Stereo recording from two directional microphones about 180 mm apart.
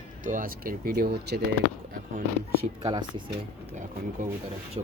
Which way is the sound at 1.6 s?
60° left (ahead or behind).